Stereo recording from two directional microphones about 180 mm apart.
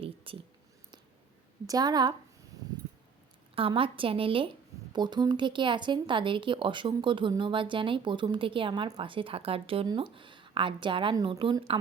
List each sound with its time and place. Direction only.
0.3 s a sound: 30° right (ahead or behind)
1.6 s a woman's voice: 20° right (ahead or behind)
3.5 s a woman's voice: 30° right (ahead or behind)